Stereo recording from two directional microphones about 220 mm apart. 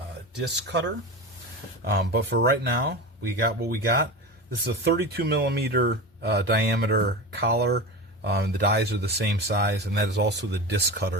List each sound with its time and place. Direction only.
0.4 s speech: 50° right (ahead or behind)